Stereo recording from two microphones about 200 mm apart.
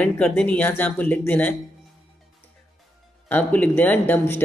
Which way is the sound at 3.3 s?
10° left (ahead or behind).